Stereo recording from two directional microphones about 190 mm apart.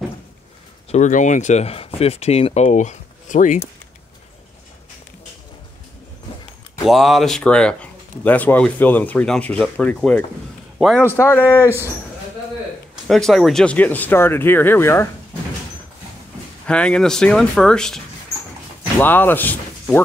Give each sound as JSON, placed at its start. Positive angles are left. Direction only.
{"t": 0.9, "sound": "speech", "side_deg": 40}
{"t": 6.9, "sound": "a man's voice", "side_deg": 0}
{"t": 11.1, "sound": "speech", "side_deg": 10}
{"t": 12.9, "sound": "speech", "side_deg": 0}
{"t": 16.6, "sound": "speech", "side_deg": 5}